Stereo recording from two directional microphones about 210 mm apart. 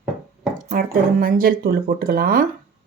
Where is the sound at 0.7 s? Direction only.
45° right (ahead or behind).